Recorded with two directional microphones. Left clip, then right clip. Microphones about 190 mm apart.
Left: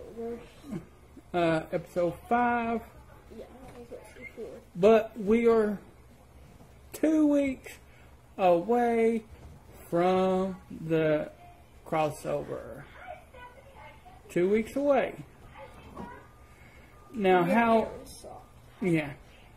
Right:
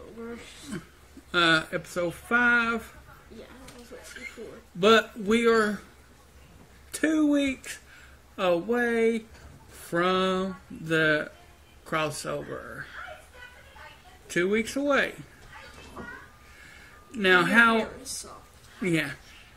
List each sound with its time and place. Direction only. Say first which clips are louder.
0.7 s speech: left 1 dB; 5° right (ahead or behind)
4.8 s speech: right 1 dB; 5° right (ahead or behind)
7.2 s speech: right 1 dB; 5° left (ahead or behind)
14.3 s speech: right 1 dB; 5° right (ahead or behind)
17.2 s speech: right 4 dB; centre (ahead or behind)
18.8 s speech: right 2 dB; centre (ahead or behind)